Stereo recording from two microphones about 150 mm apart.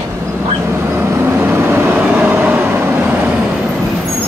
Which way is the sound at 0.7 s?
15° right (ahead or behind).